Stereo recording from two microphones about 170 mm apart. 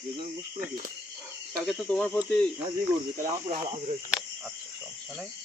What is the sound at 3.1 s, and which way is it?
Speech, 40° right (ahead or behind).